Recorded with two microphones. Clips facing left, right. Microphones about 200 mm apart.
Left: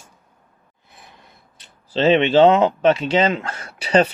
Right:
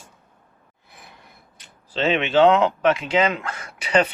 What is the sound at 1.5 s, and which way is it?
Speech, 30° left (ahead or behind).